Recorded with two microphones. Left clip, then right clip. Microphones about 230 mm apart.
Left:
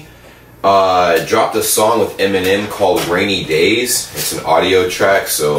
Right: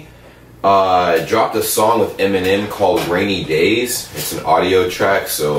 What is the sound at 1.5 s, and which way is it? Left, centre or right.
Speech, centre.